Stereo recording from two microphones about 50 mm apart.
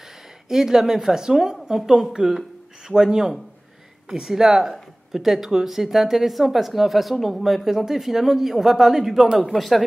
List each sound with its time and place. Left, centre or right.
0.5 s a woman's voice: centre
9.6 s speech: centre